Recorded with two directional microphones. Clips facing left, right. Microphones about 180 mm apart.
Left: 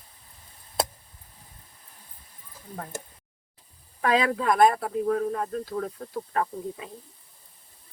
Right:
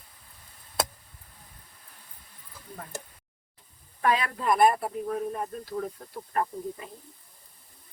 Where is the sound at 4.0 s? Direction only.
90° left.